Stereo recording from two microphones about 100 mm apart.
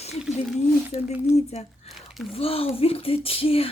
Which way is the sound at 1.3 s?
90° left.